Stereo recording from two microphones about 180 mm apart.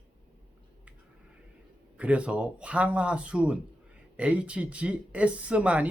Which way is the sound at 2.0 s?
5° right (ahead or behind).